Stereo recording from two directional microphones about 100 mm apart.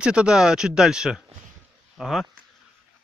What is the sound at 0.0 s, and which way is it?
Speech, 10° right (ahead or behind).